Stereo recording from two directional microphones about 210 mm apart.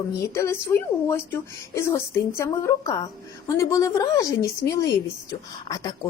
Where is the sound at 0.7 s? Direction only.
10° left (ahead or behind).